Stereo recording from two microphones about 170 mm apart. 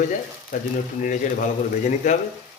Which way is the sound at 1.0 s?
50° left (ahead or behind).